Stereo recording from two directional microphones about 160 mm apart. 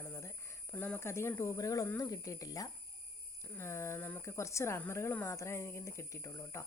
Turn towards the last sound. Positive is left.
turn(degrees=20)  # may be behind; listen again after turning